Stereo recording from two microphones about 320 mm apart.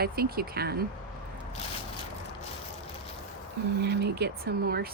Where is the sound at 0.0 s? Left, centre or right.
Right.